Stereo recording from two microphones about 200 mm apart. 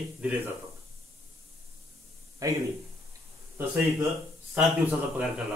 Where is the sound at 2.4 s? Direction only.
15° right (ahead or behind).